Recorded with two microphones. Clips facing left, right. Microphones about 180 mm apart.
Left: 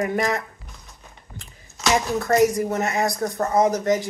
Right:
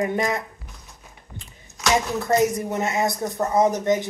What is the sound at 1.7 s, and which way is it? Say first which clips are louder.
Speech: left 1 dB; 20° right (ahead or behind).